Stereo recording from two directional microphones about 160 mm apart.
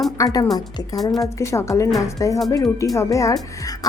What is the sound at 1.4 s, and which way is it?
Speech, 20° left (ahead or behind).